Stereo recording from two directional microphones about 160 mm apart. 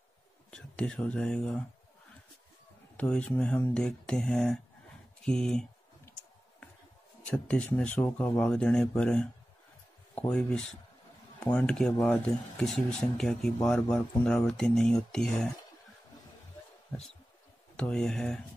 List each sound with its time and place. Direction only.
0.5 s speech: 5° left (ahead or behind)
3.0 s speech: 10° left (ahead or behind)
7.2 s speech: 5° left (ahead or behind)
17.7 s speech: 5° left (ahead or behind)